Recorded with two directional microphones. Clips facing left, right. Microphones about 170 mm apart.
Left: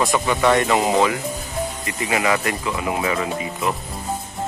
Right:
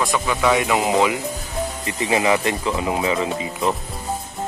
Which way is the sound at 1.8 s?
25° right (ahead or behind).